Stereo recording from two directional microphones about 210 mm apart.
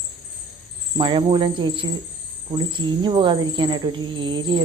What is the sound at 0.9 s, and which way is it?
Speech, 25° right (ahead or behind).